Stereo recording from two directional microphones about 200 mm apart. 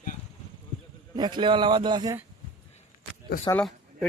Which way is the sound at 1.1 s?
20° right (ahead or behind).